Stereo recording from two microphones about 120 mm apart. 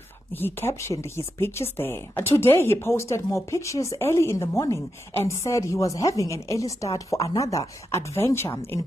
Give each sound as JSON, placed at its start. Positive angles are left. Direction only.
{"t": 0.3, "sound": "speech", "side_deg": 15}